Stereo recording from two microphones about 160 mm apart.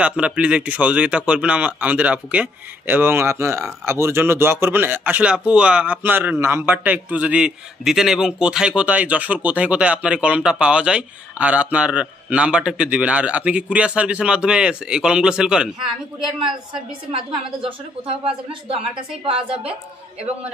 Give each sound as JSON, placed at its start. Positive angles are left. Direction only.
{"t": 0.0, "sound": "a man's voice", "side_deg": -5}
{"t": 17.1, "sound": "a woman's voice", "side_deg": -35}